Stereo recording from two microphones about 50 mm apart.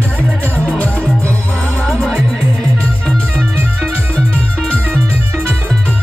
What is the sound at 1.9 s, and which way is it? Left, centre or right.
Music, centre.